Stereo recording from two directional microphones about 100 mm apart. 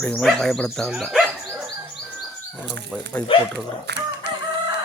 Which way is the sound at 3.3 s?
65° left (ahead or behind).